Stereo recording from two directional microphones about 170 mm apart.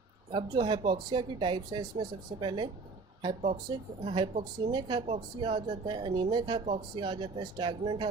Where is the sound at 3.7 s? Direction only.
30° right (ahead or behind).